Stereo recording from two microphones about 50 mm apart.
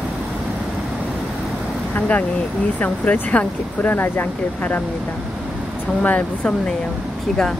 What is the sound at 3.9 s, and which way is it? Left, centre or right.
Speech, left.